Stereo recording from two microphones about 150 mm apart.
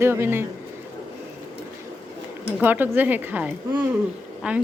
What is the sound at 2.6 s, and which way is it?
Speech, 10° right (ahead or behind).